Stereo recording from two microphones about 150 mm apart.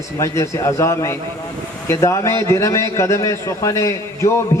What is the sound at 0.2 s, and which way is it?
A man's voice, 20° left (ahead or behind).